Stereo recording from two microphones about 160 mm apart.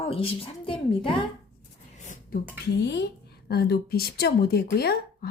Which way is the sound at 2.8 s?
90° left.